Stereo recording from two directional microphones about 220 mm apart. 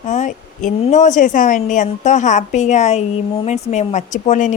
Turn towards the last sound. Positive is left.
turn(degrees=35)  # may be behind; listen again after turning